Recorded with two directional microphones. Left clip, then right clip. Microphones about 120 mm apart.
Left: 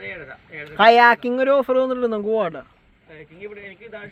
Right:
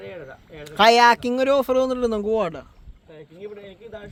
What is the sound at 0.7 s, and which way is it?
Speech, 40° right (ahead or behind).